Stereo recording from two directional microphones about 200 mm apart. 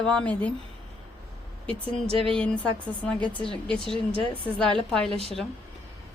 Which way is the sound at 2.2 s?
5° left (ahead or behind).